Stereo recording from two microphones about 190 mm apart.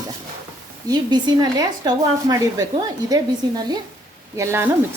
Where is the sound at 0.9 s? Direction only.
20° right (ahead or behind).